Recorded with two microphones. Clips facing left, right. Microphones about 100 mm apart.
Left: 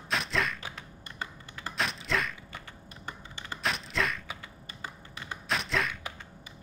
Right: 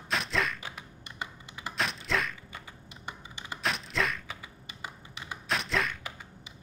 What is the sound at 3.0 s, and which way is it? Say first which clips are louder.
Computer keyboard: even; 15° right (ahead or behind).